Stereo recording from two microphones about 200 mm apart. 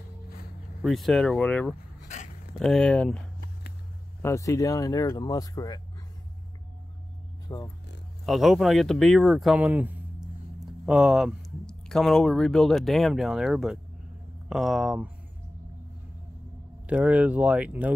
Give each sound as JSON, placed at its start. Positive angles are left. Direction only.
{"t": 0.8, "sound": "speech", "side_deg": 0}
{"t": 4.2, "sound": "speech", "side_deg": 15}
{"t": 7.4, "sound": "speech", "side_deg": 20}
{"t": 8.3, "sound": "speech", "side_deg": 0}
{"t": 16.8, "sound": "speech", "side_deg": -5}